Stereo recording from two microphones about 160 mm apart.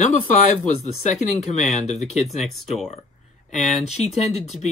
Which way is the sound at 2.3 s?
Centre (ahead or behind).